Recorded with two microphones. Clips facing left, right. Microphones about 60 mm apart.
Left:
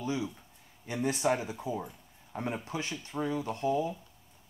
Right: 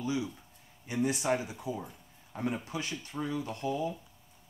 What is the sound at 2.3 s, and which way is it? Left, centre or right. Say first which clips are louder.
Speech: even; centre.